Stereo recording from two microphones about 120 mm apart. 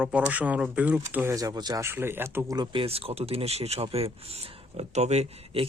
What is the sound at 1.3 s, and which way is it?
Speech, 30° right (ahead or behind).